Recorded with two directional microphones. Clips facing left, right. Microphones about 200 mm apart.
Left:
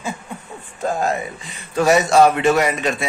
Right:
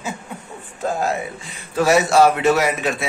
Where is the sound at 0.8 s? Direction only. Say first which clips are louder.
Left 1 dB; 5° right (ahead or behind).